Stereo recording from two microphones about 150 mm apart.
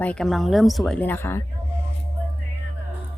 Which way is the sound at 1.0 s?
15° left (ahead or behind).